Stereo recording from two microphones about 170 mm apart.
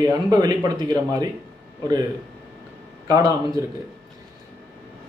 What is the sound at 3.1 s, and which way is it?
Speech, 20° right (ahead or behind).